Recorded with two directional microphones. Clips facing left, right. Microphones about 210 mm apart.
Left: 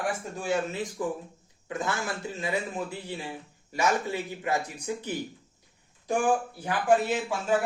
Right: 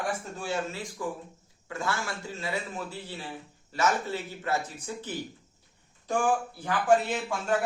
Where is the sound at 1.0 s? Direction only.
20° left (ahead or behind).